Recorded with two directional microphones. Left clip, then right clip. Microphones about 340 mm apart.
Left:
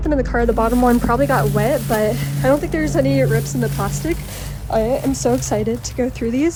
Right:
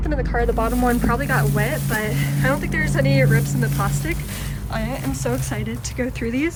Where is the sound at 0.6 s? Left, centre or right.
Right.